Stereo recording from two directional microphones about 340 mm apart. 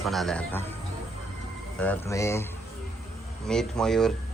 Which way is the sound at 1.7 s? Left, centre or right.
Centre.